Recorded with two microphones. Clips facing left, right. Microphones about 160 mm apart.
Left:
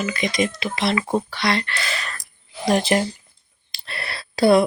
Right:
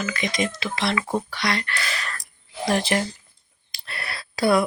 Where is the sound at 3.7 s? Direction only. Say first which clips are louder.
Left 2 dB; 30° left (ahead or behind).